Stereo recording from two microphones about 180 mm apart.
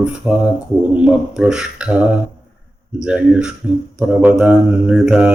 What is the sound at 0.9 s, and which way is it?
A man's voice, 5° right (ahead or behind).